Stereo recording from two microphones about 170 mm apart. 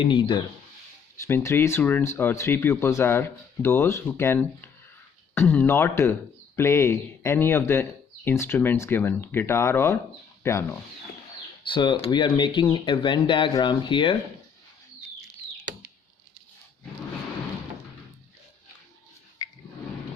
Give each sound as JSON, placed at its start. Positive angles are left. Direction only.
{"t": 0.0, "sound": "speech", "side_deg": 30}
{"t": 1.2, "sound": "speech", "side_deg": 15}
{"t": 11.7, "sound": "speech", "side_deg": 30}